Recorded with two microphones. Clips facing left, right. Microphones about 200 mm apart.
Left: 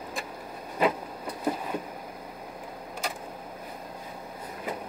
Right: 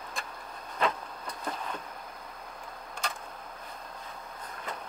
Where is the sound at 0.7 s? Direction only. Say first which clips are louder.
Left 5 dB; 10° left (ahead or behind).